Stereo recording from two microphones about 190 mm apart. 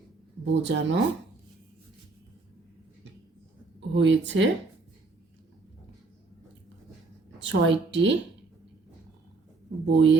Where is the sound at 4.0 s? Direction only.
70° right (ahead or behind).